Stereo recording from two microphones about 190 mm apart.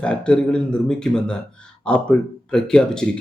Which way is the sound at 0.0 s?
5° left (ahead or behind).